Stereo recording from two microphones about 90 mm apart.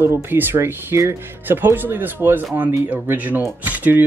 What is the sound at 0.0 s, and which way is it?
Speech, 25° right (ahead or behind).